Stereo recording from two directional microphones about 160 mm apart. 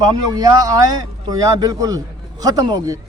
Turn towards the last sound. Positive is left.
turn(degrees=-25)  # may be behind; listen again after turning